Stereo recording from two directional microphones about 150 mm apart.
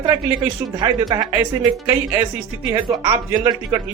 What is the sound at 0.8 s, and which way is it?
Speech, 25° right (ahead or behind).